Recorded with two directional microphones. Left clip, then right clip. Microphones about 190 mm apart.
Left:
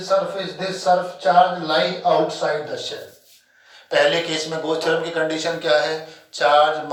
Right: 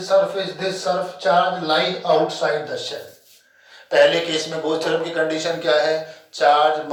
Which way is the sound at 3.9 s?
20° left (ahead or behind).